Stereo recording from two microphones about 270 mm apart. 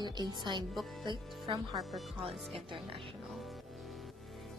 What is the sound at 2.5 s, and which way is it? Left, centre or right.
Speech, centre.